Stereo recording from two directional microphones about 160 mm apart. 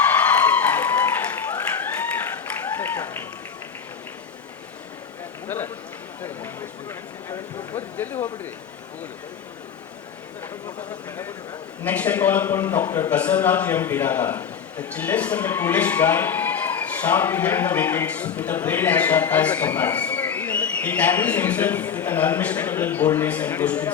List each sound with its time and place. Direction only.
0.1 s applause: 10° left (ahead or behind)
5.5 s a sound: 15° left (ahead or behind)
11.8 s a man's voice: 10° left (ahead or behind)